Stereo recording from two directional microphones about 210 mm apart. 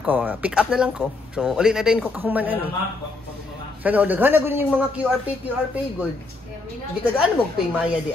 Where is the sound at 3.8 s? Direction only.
10° right (ahead or behind).